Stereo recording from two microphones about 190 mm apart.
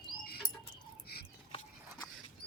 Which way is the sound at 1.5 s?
25° left (ahead or behind).